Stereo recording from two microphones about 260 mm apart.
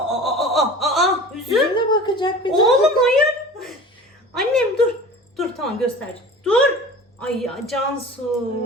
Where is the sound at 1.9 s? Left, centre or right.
Centre.